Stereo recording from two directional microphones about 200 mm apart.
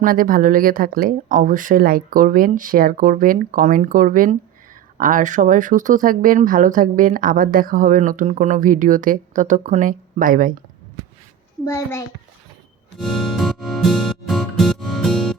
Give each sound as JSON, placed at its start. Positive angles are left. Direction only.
{"t": 0.0, "sound": "speech", "side_deg": -45}
{"t": 11.6, "sound": "a child's voice", "side_deg": 15}
{"t": 13.0, "sound": "music", "side_deg": 0}